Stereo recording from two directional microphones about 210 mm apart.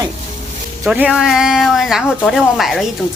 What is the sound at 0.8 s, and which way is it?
Speech, 5° right (ahead or behind).